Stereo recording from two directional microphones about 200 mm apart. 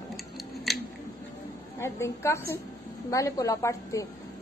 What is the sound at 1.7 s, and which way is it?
A woman's voice, 10° left (ahead or behind).